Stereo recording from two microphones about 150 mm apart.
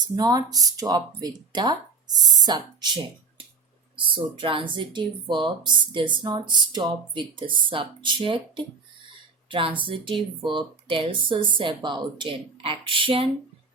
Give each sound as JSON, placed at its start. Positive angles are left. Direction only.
{"t": 0.2, "sound": "speech", "side_deg": -25}